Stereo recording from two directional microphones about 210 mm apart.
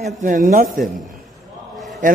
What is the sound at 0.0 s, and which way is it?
Speech, 40° right (ahead or behind).